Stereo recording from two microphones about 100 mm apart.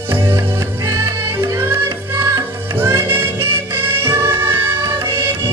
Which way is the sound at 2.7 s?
25° right (ahead or behind).